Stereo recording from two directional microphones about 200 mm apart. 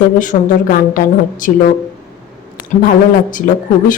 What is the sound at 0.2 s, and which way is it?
A woman's voice, 40° left (ahead or behind).